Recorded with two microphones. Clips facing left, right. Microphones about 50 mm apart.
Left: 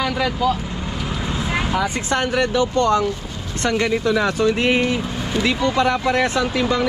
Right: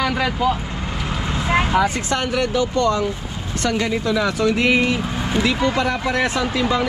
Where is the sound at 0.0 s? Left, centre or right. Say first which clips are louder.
Even; centre.